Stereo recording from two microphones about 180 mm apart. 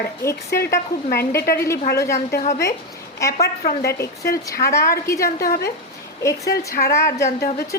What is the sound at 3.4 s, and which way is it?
Speech, 65° left (ahead or behind).